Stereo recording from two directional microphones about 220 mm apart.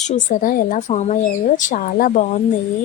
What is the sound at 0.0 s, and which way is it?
Speech, 35° left (ahead or behind).